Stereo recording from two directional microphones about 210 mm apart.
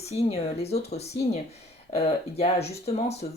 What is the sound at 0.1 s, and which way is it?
Speech, 30° left (ahead or behind).